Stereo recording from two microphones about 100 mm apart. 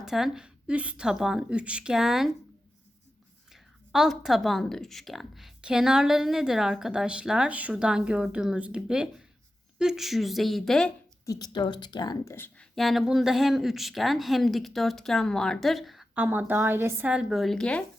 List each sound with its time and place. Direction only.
0.0 s a woman's voice: 5° right (ahead or behind)
3.5 s speech: 5° right (ahead or behind)
11.3 s speech: 40° left (ahead or behind)
12.2 s speech: 30° left (ahead or behind)
12.7 s speech: centre (ahead or behind)
16.1 s a woman's voice: 15° right (ahead or behind)
17.1 s speech: 5° right (ahead or behind); by 17.8 s 10° left (ahead or behind)